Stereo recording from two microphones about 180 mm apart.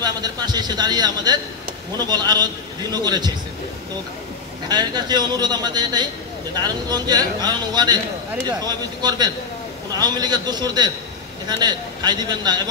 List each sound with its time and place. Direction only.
0.0 s speech: 25° right (ahead or behind)
4.6 s speech: 25° right (ahead or behind)